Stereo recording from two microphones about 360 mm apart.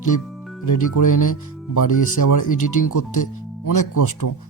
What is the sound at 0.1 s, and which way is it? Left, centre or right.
Speech, left.